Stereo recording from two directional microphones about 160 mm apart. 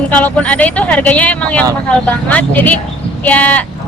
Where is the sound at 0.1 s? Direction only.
10° left (ahead or behind).